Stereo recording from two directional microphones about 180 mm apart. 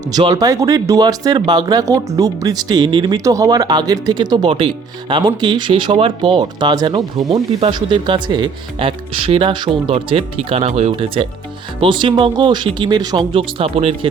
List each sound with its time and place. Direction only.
0.1 s speech: 25° right (ahead or behind)